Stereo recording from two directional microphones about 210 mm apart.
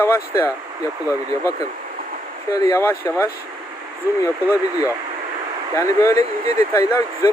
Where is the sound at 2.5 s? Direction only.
15° left (ahead or behind).